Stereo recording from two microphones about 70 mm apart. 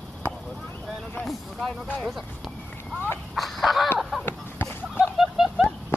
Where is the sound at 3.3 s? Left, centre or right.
Centre.